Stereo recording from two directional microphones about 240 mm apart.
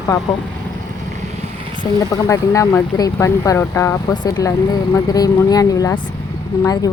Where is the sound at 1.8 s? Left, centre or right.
Centre.